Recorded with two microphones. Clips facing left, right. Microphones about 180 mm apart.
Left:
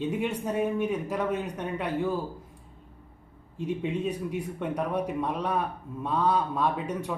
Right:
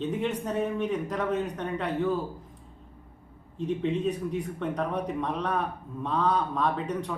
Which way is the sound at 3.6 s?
10° left (ahead or behind).